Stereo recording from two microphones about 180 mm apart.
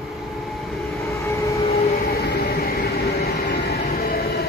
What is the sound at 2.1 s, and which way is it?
Train, 60° left (ahead or behind).